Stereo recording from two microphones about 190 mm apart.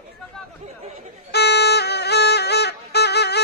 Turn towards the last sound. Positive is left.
turn(degrees=60)  # may be behind; listen again after turning